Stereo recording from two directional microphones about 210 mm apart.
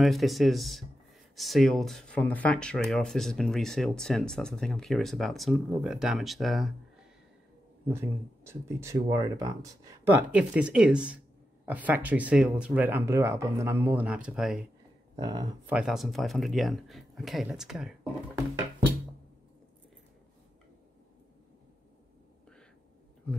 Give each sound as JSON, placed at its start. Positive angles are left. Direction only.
{"t": 0.0, "sound": "speech", "side_deg": 0}
{"t": 7.9, "sound": "speech", "side_deg": -10}
{"t": 15.1, "sound": "speech", "side_deg": -20}
{"t": 15.7, "sound": "speech", "side_deg": 0}